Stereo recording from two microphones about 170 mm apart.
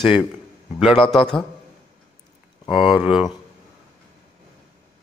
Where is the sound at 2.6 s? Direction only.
30° left (ahead or behind).